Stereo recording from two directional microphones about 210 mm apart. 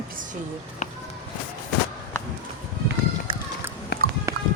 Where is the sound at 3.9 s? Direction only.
50° left (ahead or behind).